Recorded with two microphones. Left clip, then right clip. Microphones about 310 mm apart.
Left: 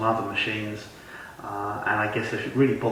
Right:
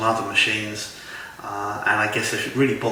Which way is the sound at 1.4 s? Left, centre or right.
Centre.